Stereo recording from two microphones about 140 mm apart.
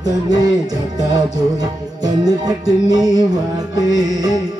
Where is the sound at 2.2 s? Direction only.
25° right (ahead or behind).